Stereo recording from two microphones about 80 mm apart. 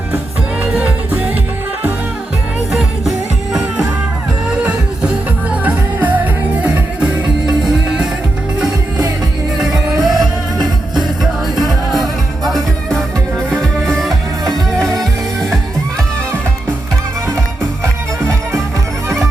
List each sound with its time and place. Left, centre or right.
5.5 s music: right
7.4 s music: centre
9.6 s music: centre
12.5 s music: centre
17.8 s music: right